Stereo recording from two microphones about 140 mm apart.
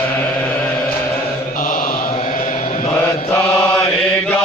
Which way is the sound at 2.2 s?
60° left (ahead or behind).